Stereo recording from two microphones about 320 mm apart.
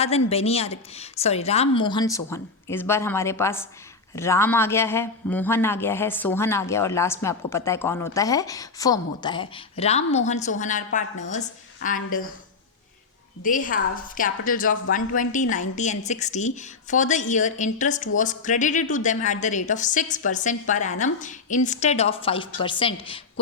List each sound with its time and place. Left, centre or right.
0.3 s a man's voice: centre
13.4 s a woman's voice: left